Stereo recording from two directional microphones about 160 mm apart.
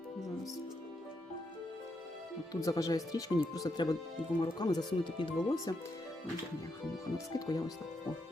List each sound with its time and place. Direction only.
2.5 s speech: 20° left (ahead or behind)
7.3 s speech: 25° left (ahead or behind)